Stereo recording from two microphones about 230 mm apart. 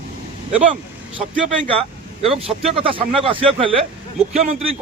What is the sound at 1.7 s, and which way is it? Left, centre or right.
Speech, right.